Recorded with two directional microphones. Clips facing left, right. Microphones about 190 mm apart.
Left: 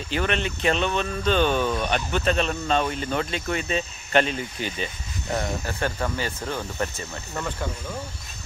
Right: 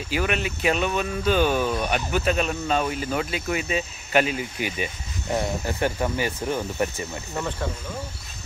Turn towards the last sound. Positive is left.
turn(degrees=-15)  # may be behind; listen again after turning